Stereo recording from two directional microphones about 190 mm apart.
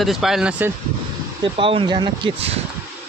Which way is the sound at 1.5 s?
30° right (ahead or behind).